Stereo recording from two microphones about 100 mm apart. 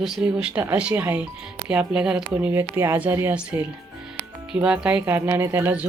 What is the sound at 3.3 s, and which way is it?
Speech, 10° right (ahead or behind).